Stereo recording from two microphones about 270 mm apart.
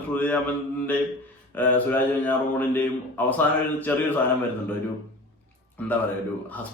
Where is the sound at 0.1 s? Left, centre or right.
Centre.